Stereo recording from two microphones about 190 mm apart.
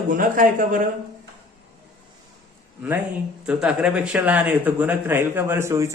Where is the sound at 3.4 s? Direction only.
5° right (ahead or behind).